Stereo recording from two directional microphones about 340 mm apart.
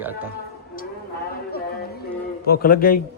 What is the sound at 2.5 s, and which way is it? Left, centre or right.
Speech, left.